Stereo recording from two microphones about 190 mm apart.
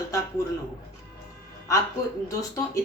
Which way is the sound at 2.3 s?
20° left (ahead or behind).